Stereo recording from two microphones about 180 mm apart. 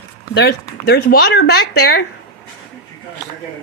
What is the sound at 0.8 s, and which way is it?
Speech, 60° left (ahead or behind).